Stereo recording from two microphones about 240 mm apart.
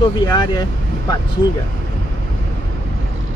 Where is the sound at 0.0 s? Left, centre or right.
Centre.